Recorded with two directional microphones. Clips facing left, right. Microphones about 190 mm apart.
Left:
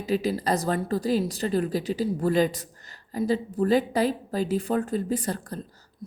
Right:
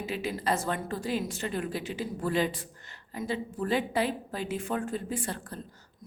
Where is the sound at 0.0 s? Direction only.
40° left (ahead or behind).